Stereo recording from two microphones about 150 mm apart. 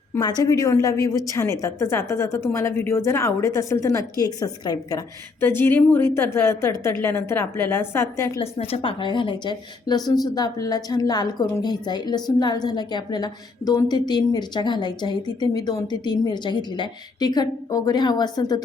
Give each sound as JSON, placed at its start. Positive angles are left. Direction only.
{"t": 0.2, "sound": "a woman's voice", "side_deg": 25}
{"t": 5.4, "sound": "a woman's voice", "side_deg": 15}
{"t": 8.4, "sound": "a woman's voice", "side_deg": 40}